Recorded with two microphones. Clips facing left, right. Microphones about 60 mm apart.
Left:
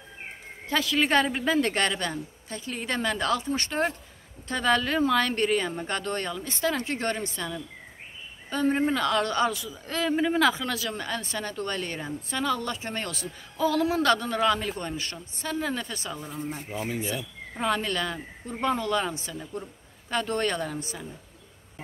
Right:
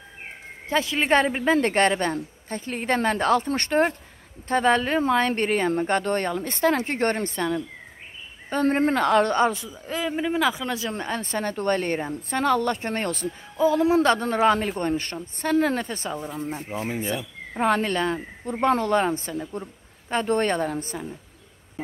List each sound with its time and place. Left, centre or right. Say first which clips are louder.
0.7 s speech: right 3 dB; right
9.8 s speech: even; centre
10.7 s speech: right 3 dB; right
13.6 s speech: right 5 dB; right
19.3 s speech: right 5 dB; right